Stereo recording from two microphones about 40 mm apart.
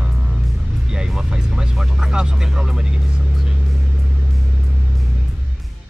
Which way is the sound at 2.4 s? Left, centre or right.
Centre.